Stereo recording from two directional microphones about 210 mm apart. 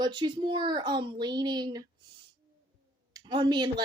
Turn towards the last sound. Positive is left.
turn(degrees=-20)  # may be behind; listen again after turning